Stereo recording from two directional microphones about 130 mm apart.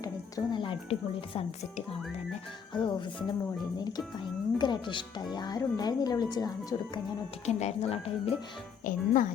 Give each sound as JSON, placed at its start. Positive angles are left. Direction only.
{"t": 0.0, "sound": "speech", "side_deg": 30}
{"t": 2.7, "sound": "speech", "side_deg": 35}
{"t": 7.4, "sound": "speech", "side_deg": 55}
{"t": 8.8, "sound": "speech", "side_deg": 90}